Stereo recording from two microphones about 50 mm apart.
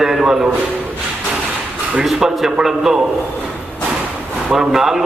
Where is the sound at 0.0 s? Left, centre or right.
Centre.